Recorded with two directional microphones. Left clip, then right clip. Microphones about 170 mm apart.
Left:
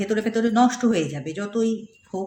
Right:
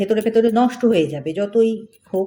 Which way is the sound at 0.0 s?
20° right (ahead or behind).